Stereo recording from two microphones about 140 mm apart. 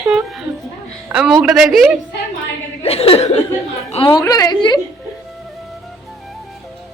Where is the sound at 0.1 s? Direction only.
Centre (ahead or behind).